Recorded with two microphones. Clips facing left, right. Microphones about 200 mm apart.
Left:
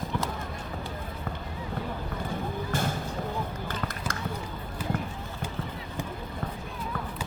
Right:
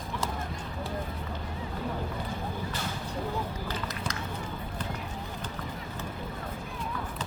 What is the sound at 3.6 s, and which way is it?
Basketball bounce, 50° left (ahead or behind).